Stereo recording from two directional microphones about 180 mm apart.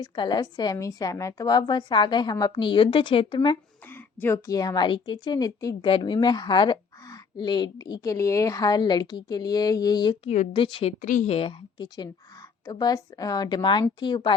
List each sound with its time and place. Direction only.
0.0 s a woman's voice: 25° left (ahead or behind)
3.8 s a woman's voice: 10° left (ahead or behind)
10.2 s a woman's voice: 40° left (ahead or behind)
10.5 s a woman's voice: 30° left (ahead or behind)
11.0 s a woman's voice: 45° left (ahead or behind); by 14.3 s 25° left (ahead or behind)